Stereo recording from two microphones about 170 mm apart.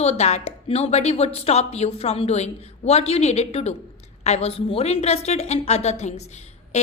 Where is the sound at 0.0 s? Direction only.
40° left (ahead or behind).